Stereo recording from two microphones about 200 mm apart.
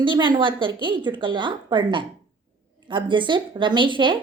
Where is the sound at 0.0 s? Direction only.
25° right (ahead or behind).